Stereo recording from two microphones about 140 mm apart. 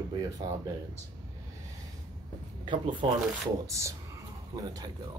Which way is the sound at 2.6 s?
35° right (ahead or behind).